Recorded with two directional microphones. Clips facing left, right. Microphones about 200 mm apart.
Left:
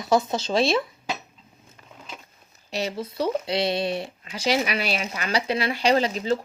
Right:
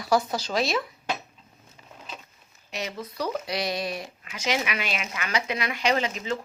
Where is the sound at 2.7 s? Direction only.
30° left (ahead or behind).